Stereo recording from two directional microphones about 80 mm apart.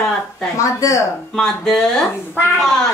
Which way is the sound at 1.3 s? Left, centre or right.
Centre.